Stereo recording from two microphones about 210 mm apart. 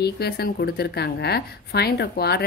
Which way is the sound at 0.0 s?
50° left (ahead or behind).